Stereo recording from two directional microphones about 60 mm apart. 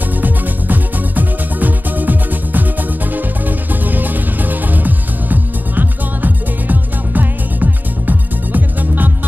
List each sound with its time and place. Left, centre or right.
0.2 s music: right